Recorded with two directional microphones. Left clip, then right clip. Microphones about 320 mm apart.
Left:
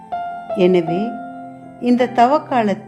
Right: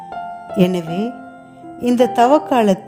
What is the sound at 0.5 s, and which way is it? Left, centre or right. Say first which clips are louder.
Speech: left 4 dB; right.